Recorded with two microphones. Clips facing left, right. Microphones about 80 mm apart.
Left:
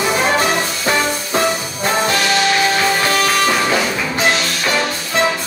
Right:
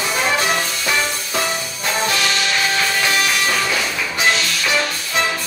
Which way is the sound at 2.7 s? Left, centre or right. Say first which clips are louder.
Left 3 dB; left.